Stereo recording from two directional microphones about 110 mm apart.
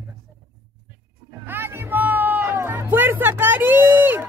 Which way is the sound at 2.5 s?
20° right (ahead or behind).